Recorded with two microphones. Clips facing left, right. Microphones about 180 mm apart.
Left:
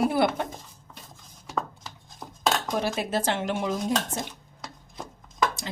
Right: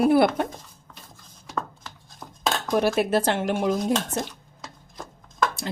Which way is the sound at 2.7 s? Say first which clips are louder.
Right 6 dB; 60° right (ahead or behind).